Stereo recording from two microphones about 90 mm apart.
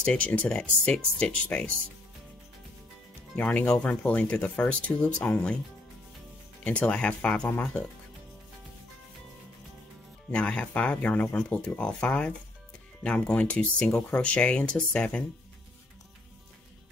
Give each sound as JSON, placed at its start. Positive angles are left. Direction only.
{"t": 0.0, "sound": "speech", "side_deg": 15}
{"t": 3.3, "sound": "speech", "side_deg": 15}
{"t": 6.6, "sound": "speech", "side_deg": 15}
{"t": 10.3, "sound": "speech", "side_deg": 15}